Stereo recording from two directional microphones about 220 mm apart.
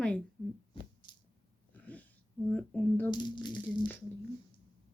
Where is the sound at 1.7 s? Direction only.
5° left (ahead or behind).